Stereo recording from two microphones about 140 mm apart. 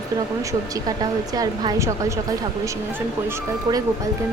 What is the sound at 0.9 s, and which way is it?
A woman's voice, 25° right (ahead or behind).